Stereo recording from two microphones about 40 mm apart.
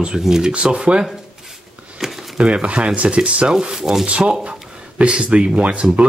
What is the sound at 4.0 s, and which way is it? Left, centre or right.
Speech, right.